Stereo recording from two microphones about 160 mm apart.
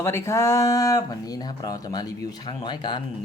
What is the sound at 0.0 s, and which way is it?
Speech, 15° left (ahead or behind).